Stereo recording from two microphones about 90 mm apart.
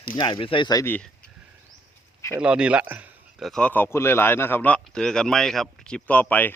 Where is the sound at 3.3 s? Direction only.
Centre (ahead or behind).